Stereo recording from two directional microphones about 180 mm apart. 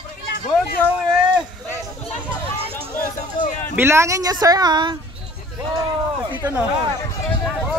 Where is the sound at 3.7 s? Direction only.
15° right (ahead or behind).